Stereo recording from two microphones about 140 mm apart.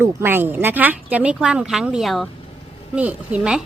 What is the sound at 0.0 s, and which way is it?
A woman's voice, 15° right (ahead or behind).